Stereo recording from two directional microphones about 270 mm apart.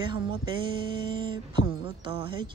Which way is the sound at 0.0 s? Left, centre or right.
Centre.